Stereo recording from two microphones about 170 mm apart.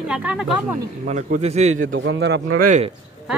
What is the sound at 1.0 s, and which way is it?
Speech, 45° right (ahead or behind).